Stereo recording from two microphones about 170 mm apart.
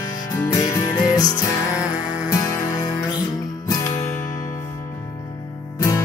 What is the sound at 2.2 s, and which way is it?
Music, 15° left (ahead or behind).